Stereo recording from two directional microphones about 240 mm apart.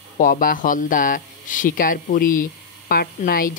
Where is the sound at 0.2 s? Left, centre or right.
Left.